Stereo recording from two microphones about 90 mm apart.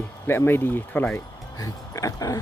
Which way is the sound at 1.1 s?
35° left (ahead or behind).